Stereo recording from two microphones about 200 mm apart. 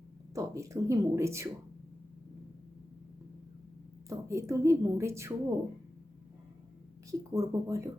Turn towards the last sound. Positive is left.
turn(degrees=-15)  # may be behind; listen again after turning